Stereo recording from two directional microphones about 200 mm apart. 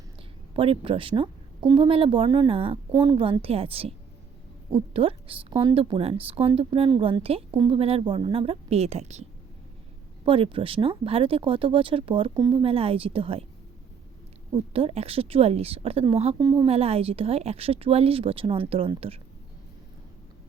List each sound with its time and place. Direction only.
0.5 s a woman's voice: 25° right (ahead or behind)
10.2 s a woman's voice: 25° right (ahead or behind)
14.5 s a woman's voice: 30° right (ahead or behind)
16.4 s a woman's voice: 20° right (ahead or behind)